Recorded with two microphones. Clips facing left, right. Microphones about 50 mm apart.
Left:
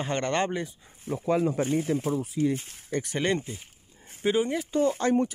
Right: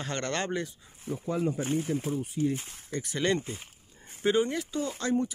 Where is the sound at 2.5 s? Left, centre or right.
Left.